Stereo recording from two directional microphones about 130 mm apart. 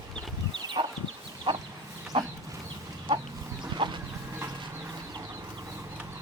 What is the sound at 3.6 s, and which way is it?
Chicken, 35° right (ahead or behind).